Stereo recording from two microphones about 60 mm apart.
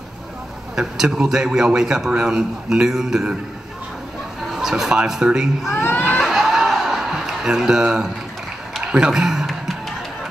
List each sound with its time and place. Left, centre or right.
0.7 s a man's voice: centre
4.5 s a man's voice: centre
5.8 s music: left
6.0 s snicker: centre
8.8 s a man's voice: centre
9.5 s music: centre